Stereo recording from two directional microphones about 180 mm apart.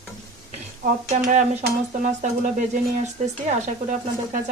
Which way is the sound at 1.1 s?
40° right (ahead or behind).